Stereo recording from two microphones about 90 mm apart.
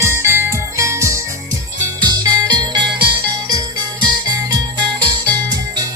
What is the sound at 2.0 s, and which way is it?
Music, 50° right (ahead or behind).